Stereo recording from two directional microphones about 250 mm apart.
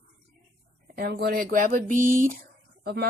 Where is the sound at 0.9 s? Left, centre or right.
Right.